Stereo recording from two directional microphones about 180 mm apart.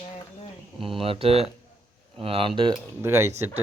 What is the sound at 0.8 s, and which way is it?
Speech, 30° right (ahead or behind).